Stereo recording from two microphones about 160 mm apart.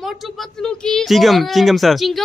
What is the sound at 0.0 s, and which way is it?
Speech, centre (ahead or behind).